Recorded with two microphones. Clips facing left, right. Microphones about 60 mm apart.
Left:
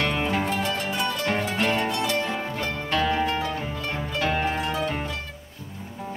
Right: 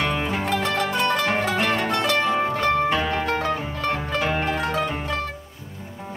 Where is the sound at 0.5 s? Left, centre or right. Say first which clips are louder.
Right 4 dB; right.